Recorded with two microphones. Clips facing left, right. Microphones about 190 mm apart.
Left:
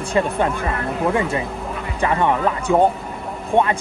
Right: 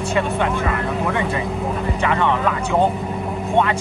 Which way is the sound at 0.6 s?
30° left (ahead or behind).